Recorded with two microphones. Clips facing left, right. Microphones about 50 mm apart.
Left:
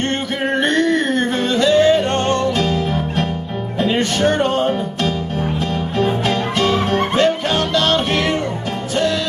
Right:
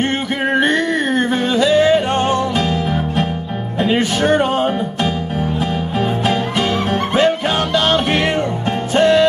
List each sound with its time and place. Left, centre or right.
0.5 s music: centre
8.9 s music: right